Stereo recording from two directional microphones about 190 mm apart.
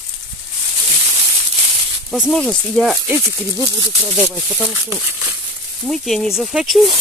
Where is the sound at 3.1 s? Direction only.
10° right (ahead or behind).